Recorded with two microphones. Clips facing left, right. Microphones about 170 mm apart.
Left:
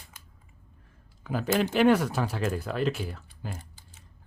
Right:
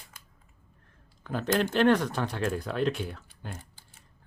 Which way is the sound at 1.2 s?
5° left (ahead or behind).